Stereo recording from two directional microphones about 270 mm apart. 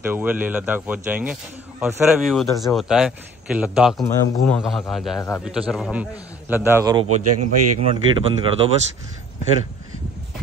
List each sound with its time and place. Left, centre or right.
0.0 s a man's voice: centre
7.1 s a man's voice: right
7.9 s speech: right